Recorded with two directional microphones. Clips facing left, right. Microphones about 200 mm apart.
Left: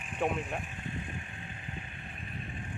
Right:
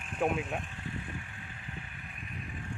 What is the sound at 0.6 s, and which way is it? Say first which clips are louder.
Vehicle: left 1 dB; 20° left (ahead or behind).